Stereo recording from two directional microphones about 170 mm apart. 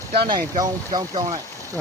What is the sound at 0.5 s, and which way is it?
Speech, 25° right (ahead or behind).